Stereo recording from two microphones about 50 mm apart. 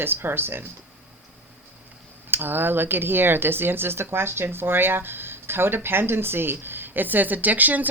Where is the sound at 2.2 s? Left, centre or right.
Right.